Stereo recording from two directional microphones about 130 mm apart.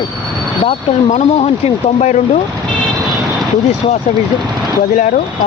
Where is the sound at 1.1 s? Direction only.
55° left (ahead or behind).